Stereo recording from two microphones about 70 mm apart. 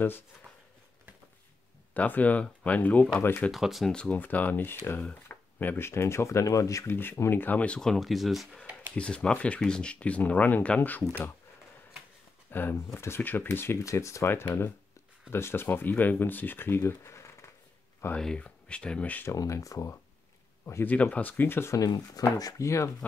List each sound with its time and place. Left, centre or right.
2.0 s speech: left
3.5 s speech: centre
3.9 s speech: centre; by 6.9 s left
6.9 s speech: left; by 8.5 s centre
8.9 s speech: centre
12.4 s a sound: left
12.7 s speech: left
13.8 s speech: left
18.1 s speech: centre
19.3 s speech: left
20.8 s speech: left
21.7 s speech: left
22.6 s speech: left